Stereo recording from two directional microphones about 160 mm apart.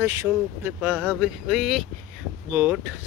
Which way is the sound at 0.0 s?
20° right (ahead or behind).